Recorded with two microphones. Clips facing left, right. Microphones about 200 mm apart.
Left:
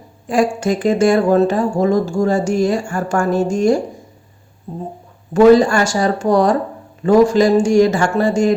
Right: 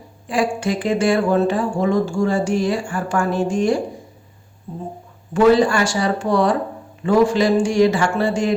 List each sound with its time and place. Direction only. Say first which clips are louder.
0.3 s speech: left 4 dB; 45° left (ahead or behind)
5.3 s speech: left 4 dB; 45° left (ahead or behind)